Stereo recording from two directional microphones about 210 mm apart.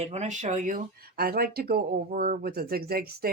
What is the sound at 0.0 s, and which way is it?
Speech, 30° right (ahead or behind).